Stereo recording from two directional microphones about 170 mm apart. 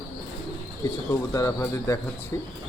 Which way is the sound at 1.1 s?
20° left (ahead or behind).